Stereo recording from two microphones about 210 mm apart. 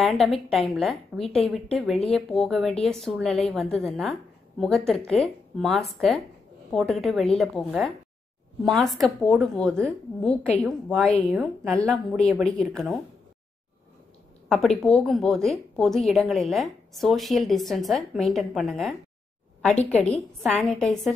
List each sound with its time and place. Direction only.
0.0 s a woman's voice: centre (ahead or behind)
14.5 s a woman's voice: centre (ahead or behind)